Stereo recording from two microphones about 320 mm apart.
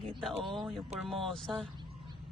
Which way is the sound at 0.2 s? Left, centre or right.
Centre.